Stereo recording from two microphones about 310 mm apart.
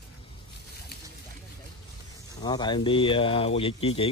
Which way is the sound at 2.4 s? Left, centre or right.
Centre.